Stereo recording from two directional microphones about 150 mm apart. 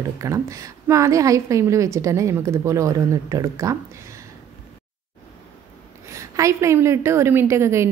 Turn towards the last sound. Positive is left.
turn(degrees=-20)  # may be behind; listen again after turning